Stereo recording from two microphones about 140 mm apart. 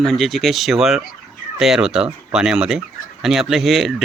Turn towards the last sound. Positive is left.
turn(degrees=0)  # may be behind; listen again after turning